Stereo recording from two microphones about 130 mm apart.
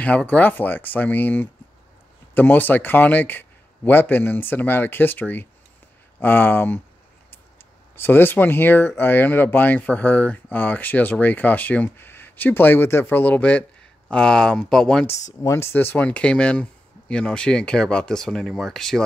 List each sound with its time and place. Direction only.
0.0 s speech: 10° left (ahead or behind)
7.9 s speech: 15° left (ahead or behind)
15.0 s speech: 20° left (ahead or behind); by 19.0 s 5° left (ahead or behind)